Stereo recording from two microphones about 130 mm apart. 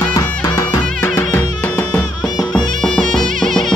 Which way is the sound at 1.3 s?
10° left (ahead or behind).